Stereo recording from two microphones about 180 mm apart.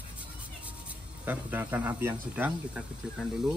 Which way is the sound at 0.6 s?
10° right (ahead or behind).